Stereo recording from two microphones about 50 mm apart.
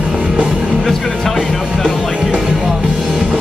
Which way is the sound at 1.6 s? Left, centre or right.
Centre.